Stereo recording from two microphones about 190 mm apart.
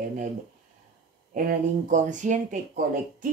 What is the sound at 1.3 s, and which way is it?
Speech, 45° right (ahead or behind).